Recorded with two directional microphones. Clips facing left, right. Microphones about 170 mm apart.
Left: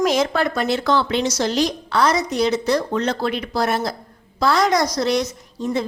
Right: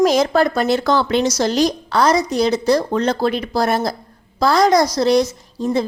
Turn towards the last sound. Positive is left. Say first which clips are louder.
# right 4 dB
turn(degrees=-35)  # may be behind; listen again after turning